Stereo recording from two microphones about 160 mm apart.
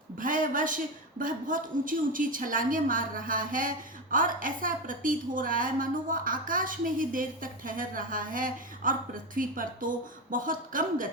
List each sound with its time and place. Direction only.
0.2 s a woman's voice: 55° right (ahead or behind)